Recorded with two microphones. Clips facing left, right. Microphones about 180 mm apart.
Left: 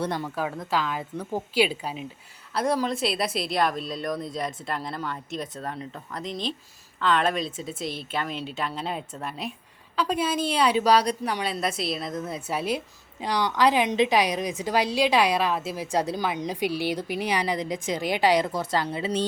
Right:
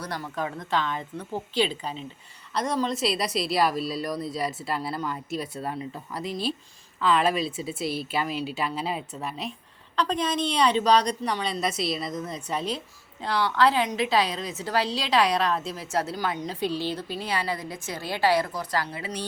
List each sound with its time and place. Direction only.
0.0 s speech: 25° left (ahead or behind)
0.3 s a woman's voice: 5° left (ahead or behind); by 19.2 s 25° left (ahead or behind)